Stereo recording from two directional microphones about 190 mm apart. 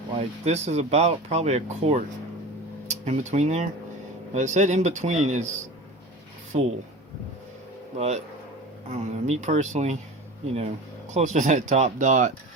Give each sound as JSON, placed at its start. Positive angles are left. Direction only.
{"t": 0.2, "sound": "speech", "side_deg": -35}
{"t": 7.9, "sound": "speech", "side_deg": -35}
{"t": 11.1, "sound": "speech", "side_deg": -40}